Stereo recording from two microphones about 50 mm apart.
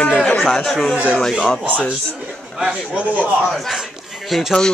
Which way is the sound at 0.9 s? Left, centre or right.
Right.